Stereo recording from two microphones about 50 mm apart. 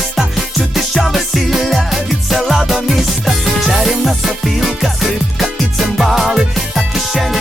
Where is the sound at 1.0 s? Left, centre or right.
Centre.